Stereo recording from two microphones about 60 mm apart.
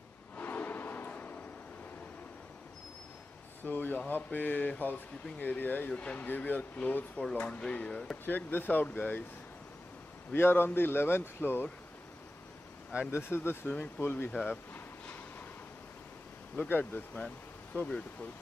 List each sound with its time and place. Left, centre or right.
0.4 s a sound: left
3.6 s speech: left
7.2 s speech: centre
10.3 s speech: left
13.1 s speech: left
13.7 s speech: left
14.4 s a sound: left
16.6 s speech: left